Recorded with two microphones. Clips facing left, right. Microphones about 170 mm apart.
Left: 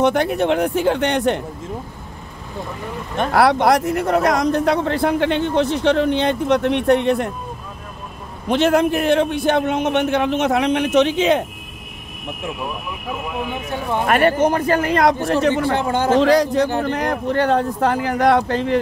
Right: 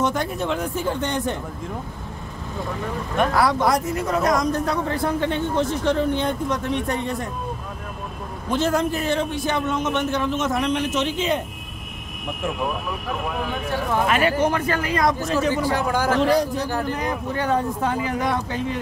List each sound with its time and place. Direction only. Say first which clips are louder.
0.0 s speech: left 7 dB; 65° left (ahead or behind)
3.3 s speech: left 8 dB; 70° left (ahead or behind)
8.5 s a man's voice: left 6 dB; 70° left (ahead or behind)
13.4 s speech: even; 20° left (ahead or behind)
14.0 s speech: left 6 dB; 55° left (ahead or behind)
14.4 s speech: left 5 dB; 45° left (ahead or behind)
15.2 s a man's voice: left 4 dB; 65° left (ahead or behind)
15.7 s speech: left 4 dB; 25° left (ahead or behind)
16.2 s speech: left 7 dB; 90° left
16.8 s speech: left 5 dB; 70° left (ahead or behind)